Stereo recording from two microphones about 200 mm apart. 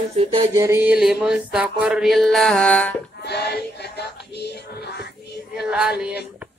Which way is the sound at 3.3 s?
55° left (ahead or behind).